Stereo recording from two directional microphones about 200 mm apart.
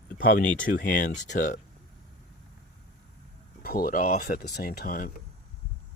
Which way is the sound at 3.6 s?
50° left (ahead or behind).